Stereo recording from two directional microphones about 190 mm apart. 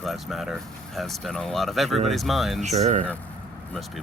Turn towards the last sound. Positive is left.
turn(degrees=-35)  # may be behind; listen again after turning